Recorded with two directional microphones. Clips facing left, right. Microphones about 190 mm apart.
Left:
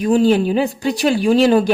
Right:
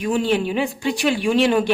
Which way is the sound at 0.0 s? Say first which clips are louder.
Left 6 dB; 40° left (ahead or behind).